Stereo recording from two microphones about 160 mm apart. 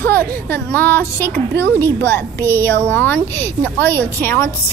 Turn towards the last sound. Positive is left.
turn(degrees=10)  # may be behind; listen again after turning